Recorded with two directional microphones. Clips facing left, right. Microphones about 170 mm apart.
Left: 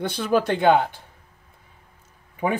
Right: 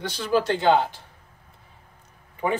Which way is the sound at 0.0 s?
55° left (ahead or behind).